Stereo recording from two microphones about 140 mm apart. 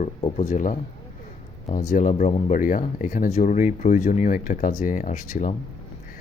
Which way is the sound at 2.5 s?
70° left (ahead or behind).